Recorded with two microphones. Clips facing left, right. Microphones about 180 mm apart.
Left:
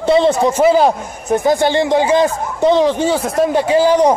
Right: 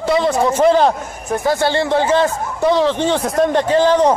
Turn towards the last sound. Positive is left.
turn(degrees=10)  # may be behind; listen again after turning